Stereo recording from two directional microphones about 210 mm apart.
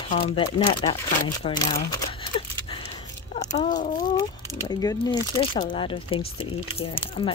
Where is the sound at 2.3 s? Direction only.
25° left (ahead or behind).